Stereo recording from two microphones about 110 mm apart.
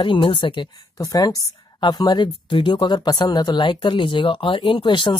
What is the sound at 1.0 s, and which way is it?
Speech, 35° left (ahead or behind).